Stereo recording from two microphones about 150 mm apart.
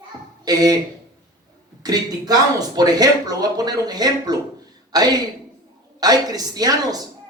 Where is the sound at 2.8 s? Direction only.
25° right (ahead or behind).